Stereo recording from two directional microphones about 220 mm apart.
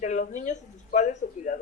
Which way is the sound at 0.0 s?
35° left (ahead or behind).